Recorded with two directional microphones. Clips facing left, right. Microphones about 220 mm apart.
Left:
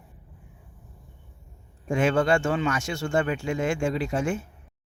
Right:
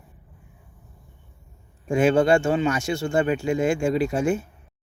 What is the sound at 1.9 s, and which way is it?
Speech, 35° right (ahead or behind).